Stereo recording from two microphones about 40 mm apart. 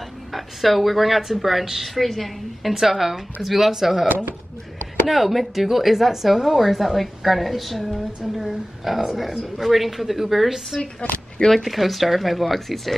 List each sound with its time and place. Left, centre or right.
0.3 s a woman's voice: centre
4.1 s speech: right
5.0 s speech: centre
11.0 s speech: left
11.3 s speech: centre
11.6 s speech: centre